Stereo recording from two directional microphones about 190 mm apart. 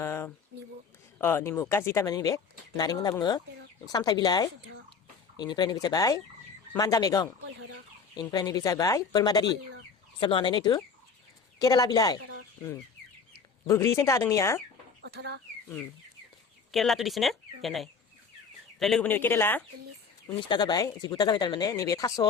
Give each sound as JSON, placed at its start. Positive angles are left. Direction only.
{"t": 0.0, "sound": "a sound", "side_deg": 15}
{"t": 1.2, "sound": "speech", "side_deg": 10}
{"t": 13.7, "sound": "speech", "side_deg": 15}
{"t": 15.0, "sound": "speech", "side_deg": -60}
{"t": 16.7, "sound": "speech", "side_deg": 0}
{"t": 20.2, "sound": "speech", "side_deg": 25}